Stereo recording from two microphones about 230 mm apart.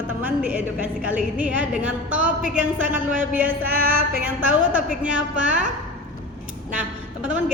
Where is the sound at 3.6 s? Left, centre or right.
Right.